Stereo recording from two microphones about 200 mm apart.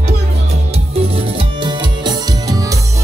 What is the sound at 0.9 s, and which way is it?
Music, 25° right (ahead or behind).